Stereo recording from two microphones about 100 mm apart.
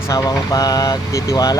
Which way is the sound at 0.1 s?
40° left (ahead or behind).